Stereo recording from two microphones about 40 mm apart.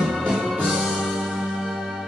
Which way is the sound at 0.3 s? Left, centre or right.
Centre.